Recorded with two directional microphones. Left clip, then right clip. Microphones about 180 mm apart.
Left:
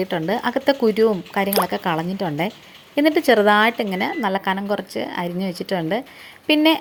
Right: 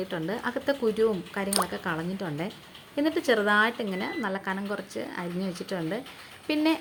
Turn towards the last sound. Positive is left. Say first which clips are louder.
# left 10 dB
turn(degrees=30)  # may be behind; listen again after turning